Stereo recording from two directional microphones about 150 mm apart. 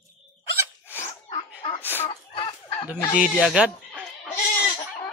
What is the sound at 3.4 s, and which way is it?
Speech, 5° right (ahead or behind).